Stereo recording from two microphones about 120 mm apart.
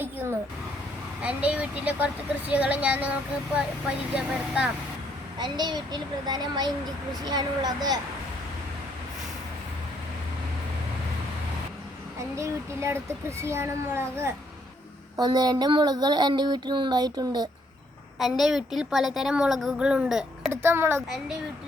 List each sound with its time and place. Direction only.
1.2 s speech: 10° right (ahead or behind)
5.4 s child singing: 35° right (ahead or behind)
12.4 s a child's voice: 25° right (ahead or behind)
15.1 s child singing: 35° right (ahead or behind)
18.2 s a woman's voice: centre (ahead or behind)
20.5 s a child's voice: 20° right (ahead or behind)